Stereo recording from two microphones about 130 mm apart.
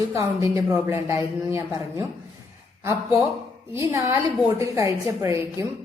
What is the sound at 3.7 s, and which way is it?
A woman's voice, 20° right (ahead or behind).